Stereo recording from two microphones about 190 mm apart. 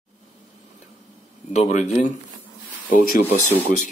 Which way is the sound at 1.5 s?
35° left (ahead or behind).